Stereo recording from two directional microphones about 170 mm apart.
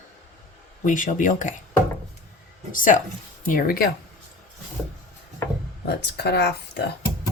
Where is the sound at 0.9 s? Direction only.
50° left (ahead or behind).